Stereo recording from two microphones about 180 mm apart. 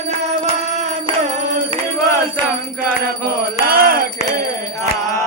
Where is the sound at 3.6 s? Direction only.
55° right (ahead or behind).